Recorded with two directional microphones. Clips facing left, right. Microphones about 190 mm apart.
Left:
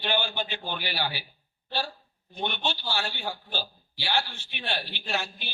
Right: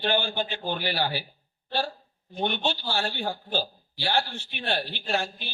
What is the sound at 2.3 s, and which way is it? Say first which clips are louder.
Speech: right 4 dB; 45° right (ahead or behind).